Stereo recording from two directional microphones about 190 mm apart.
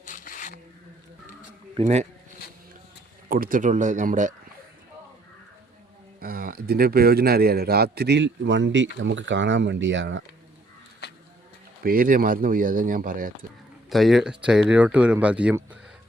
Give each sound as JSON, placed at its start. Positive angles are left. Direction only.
{"t": 0.0, "sound": "a sound", "side_deg": 45}
{"t": 1.7, "sound": "speech", "side_deg": -35}
{"t": 3.2, "sound": "speech", "side_deg": -50}
{"t": 6.1, "sound": "a man's voice", "side_deg": -50}
{"t": 11.8, "sound": "speech", "side_deg": -50}
{"t": 13.9, "sound": "speech", "side_deg": 0}